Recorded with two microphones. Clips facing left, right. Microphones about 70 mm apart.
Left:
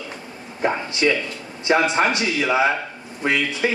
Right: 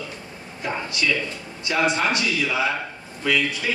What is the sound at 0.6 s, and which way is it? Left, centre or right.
A man's voice, left.